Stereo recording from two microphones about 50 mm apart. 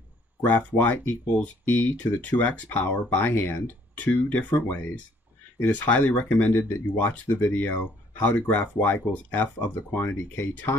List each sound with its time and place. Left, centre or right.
0.5 s speech: left
3.3 s speech: left
9.9 s speech: left